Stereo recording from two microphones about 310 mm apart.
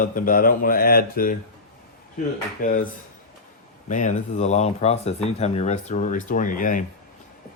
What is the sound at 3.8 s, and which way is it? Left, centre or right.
Speech, left.